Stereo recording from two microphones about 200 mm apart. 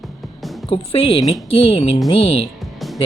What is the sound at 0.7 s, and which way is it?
Speech, 25° left (ahead or behind).